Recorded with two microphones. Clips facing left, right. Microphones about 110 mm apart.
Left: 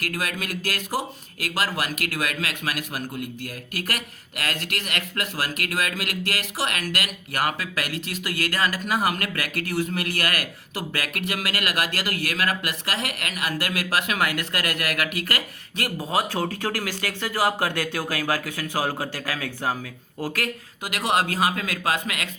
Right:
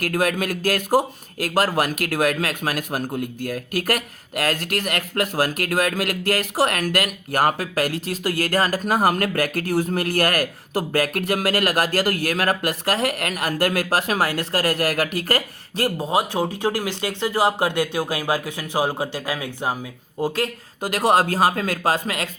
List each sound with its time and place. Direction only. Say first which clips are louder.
0.0 s speech: right 8 dB; 45° right (ahead or behind)
16.0 s speech: right 1 dB; 20° right (ahead or behind)
20.8 s speech: right 6 dB; 40° right (ahead or behind)